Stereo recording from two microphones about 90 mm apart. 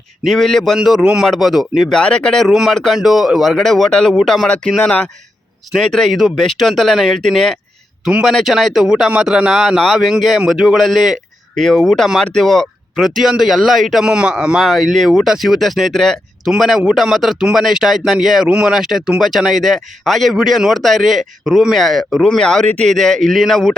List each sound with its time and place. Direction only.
0.3 s a man's voice: 5° left (ahead or behind)
2.0 s a man's voice: 10° left (ahead or behind)
5.7 s a man's voice: 5° left (ahead or behind)